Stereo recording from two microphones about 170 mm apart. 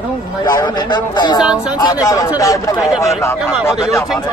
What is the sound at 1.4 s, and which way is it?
Speech, 5° right (ahead or behind).